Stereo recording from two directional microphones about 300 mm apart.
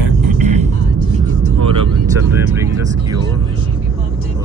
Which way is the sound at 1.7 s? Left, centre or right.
Centre.